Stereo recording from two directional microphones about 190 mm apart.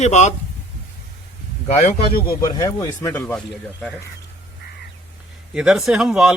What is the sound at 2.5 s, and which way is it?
Speech, 15° left (ahead or behind).